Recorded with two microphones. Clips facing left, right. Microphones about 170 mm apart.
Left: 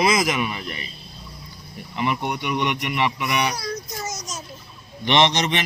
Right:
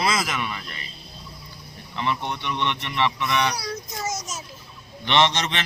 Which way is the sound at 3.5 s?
5° right (ahead or behind).